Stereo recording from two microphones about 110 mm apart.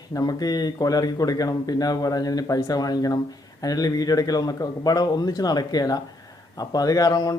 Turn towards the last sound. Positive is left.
turn(degrees=35)  # may be behind; listen again after turning